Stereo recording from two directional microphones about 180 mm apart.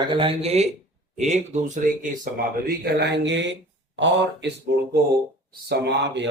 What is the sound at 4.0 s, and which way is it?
Speech, 85° right.